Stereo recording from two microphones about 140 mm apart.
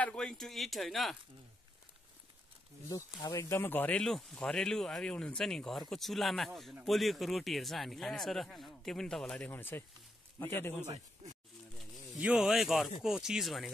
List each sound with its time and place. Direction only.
0.0 s speech: 5° left (ahead or behind)
2.9 s a man's voice: 25° left (ahead or behind)
11.2 s a sound: 50° right (ahead or behind)
12.2 s speech: 5° right (ahead or behind)